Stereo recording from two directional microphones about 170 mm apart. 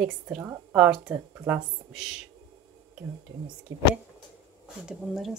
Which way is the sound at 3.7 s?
90° right.